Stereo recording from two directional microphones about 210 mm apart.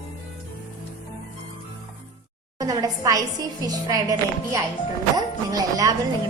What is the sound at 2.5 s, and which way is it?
A woman's voice, 15° right (ahead or behind).